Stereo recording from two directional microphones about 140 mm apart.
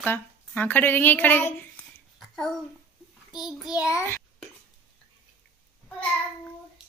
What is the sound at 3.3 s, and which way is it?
Child singing, 5° right (ahead or behind).